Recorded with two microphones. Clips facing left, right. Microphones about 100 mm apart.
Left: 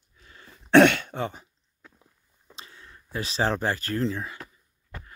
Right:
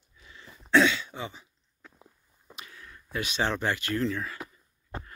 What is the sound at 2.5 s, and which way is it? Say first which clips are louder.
Speech: even; 30° left (ahead or behind).